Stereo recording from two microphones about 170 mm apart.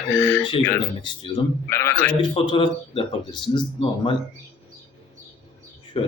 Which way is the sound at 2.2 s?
30° left (ahead or behind).